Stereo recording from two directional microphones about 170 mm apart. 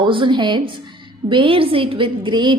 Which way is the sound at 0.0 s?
30° right (ahead or behind).